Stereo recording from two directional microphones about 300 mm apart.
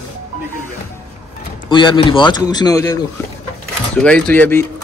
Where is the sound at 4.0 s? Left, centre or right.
Centre.